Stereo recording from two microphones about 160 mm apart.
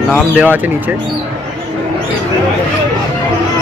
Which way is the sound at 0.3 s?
10° right (ahead or behind).